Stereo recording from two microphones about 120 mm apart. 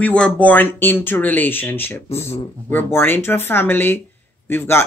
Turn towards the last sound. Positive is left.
turn(degrees=20)  # may be behind; listen again after turning